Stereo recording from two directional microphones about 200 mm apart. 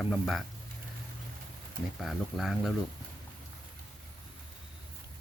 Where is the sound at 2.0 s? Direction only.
Centre (ahead or behind).